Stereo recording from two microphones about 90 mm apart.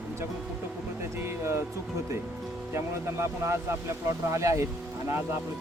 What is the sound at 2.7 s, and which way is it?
Speech, 30° right (ahead or behind).